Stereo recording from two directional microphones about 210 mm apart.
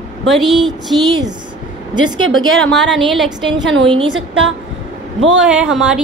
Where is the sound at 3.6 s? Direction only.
60° right (ahead or behind).